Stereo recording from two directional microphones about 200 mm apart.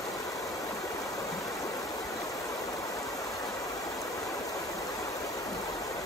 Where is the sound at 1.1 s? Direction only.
15° left (ahead or behind).